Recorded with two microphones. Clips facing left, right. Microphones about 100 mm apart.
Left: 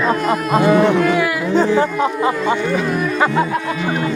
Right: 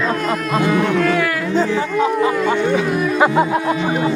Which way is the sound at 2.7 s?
5° right (ahead or behind).